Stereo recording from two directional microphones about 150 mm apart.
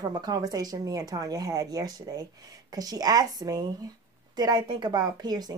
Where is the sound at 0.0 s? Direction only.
25° right (ahead or behind).